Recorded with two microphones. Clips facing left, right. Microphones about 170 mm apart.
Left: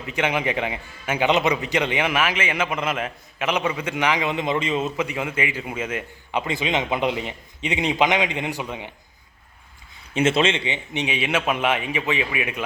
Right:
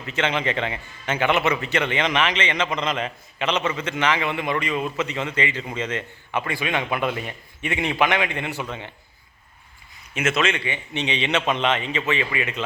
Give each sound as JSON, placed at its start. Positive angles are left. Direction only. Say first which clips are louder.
{"t": 0.0, "sound": "a man's voice", "louder": "left 1 dB", "side_deg": 15}
{"t": 4.9, "sound": "a man's voice", "louder": "even", "side_deg": 10}
{"t": 10.2, "sound": "a man's voice", "louder": "left 3 dB", "side_deg": 30}